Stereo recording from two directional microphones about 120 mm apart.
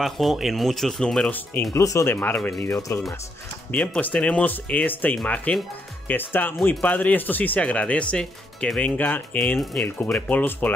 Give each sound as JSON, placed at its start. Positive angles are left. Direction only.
{"t": 0.0, "sound": "speech", "side_deg": 0}
{"t": 1.7, "sound": "speech", "side_deg": 25}